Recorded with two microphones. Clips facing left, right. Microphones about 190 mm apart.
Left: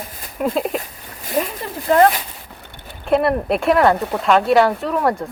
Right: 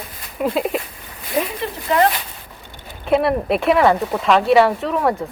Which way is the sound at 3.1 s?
Centre (ahead or behind).